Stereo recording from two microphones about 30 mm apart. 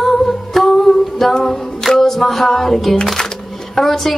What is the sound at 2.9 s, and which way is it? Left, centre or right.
Music, centre.